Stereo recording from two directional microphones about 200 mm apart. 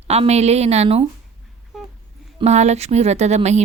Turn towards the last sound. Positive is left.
turn(degrees=-35)  # may be behind; listen again after turning